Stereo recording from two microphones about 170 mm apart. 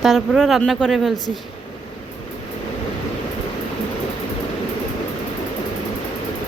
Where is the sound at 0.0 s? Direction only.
Centre (ahead or behind).